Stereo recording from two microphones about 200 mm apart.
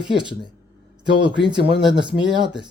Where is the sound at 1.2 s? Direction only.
20° right (ahead or behind).